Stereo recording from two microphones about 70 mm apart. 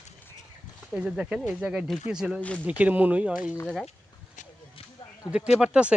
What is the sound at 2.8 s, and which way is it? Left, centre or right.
Speech, right.